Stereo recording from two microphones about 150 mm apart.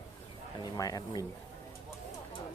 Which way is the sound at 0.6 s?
25° left (ahead or behind).